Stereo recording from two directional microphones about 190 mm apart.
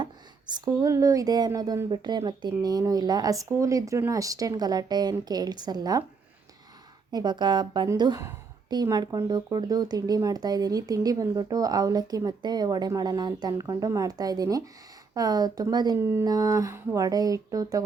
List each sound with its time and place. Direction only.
0.5 s a woman's voice: 20° right (ahead or behind)
7.1 s a woman's voice: 20° right (ahead or behind)